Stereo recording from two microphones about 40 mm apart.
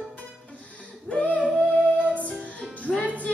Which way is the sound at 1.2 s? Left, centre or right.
Left.